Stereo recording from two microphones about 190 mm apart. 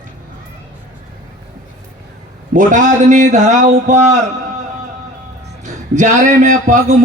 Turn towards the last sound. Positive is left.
turn(degrees=-40)  # may be behind; listen again after turning